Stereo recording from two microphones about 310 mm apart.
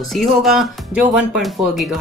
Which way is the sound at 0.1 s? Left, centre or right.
Centre.